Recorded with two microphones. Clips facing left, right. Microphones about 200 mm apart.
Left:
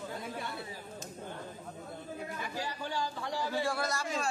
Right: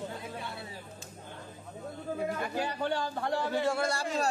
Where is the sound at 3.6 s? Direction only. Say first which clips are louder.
Right 4 dB; 25° right (ahead or behind).